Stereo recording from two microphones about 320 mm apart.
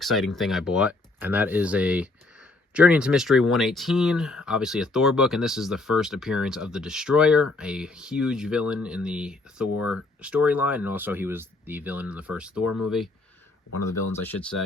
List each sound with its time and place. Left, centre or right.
0.0 s speech: centre
12.6 s speech: left